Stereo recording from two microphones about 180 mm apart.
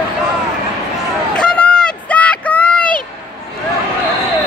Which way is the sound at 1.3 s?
5° left (ahead or behind).